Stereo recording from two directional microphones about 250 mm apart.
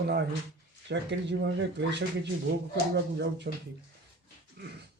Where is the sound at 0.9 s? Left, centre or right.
Right.